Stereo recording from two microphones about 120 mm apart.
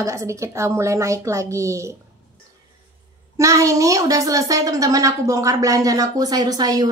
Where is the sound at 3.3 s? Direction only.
25° right (ahead or behind).